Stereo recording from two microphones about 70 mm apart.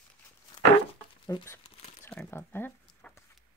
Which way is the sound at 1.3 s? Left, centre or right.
Left.